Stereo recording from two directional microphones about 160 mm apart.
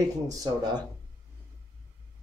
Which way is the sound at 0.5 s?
25° right (ahead or behind).